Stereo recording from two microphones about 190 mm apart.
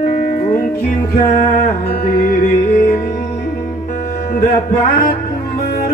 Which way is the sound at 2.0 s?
50° left (ahead or behind).